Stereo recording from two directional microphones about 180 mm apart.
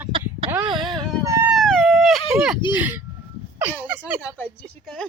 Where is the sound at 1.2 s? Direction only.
15° right (ahead or behind).